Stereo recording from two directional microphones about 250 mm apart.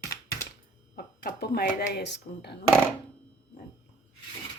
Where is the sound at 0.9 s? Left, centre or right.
Left.